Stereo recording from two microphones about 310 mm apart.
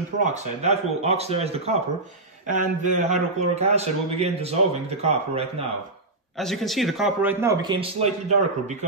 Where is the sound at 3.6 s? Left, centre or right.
Centre.